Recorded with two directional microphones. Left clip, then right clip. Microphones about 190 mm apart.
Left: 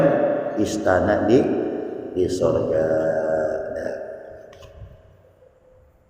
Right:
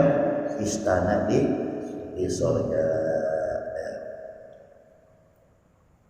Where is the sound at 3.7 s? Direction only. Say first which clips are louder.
Left 5 dB; 50° left (ahead or behind).